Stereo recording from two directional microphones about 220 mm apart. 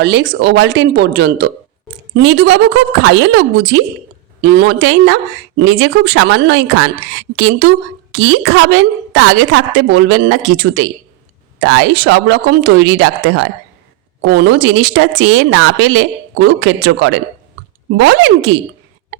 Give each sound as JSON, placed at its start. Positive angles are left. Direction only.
{"t": 0.0, "sound": "a woman's voice", "side_deg": -50}
{"t": 3.0, "sound": "a woman's voice", "side_deg": -55}